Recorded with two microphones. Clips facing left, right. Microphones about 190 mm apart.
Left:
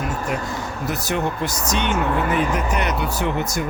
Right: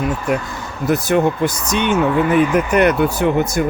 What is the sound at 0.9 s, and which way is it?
Speech, 55° right (ahead or behind).